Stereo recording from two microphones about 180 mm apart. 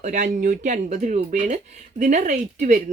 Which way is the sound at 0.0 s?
45° right (ahead or behind).